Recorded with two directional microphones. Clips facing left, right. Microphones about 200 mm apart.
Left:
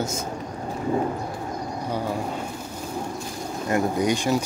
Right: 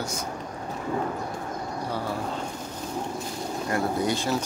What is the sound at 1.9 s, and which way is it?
Speech, 15° left (ahead or behind).